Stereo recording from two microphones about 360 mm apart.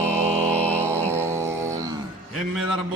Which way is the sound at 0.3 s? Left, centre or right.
Centre.